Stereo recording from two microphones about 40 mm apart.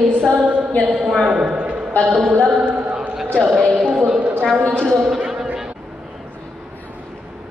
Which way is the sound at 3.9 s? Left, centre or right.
Centre.